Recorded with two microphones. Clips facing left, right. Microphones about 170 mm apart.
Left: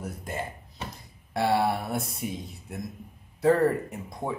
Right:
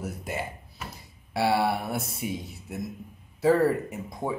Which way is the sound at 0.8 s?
30° left (ahead or behind).